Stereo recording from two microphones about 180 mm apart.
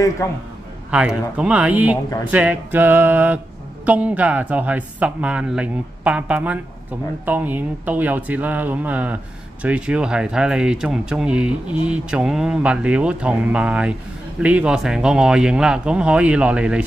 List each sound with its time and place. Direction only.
0.8 s speech: 5° right (ahead or behind)